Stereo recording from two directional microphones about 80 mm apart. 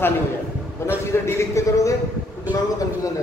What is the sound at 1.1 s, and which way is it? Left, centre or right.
Speech, left.